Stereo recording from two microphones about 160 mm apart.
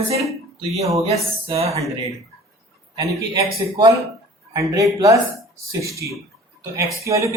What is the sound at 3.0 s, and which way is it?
Speech, 20° right (ahead or behind).